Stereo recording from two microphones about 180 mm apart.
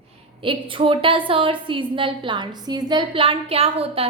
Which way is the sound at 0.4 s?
30° right (ahead or behind).